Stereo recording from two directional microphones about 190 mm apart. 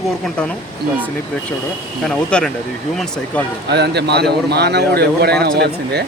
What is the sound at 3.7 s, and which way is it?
A man's voice, 60° right (ahead or behind).